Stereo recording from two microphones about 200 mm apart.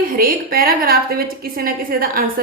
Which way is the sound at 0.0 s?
45° right (ahead or behind).